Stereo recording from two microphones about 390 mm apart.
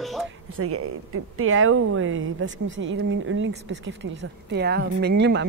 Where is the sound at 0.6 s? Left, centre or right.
Right.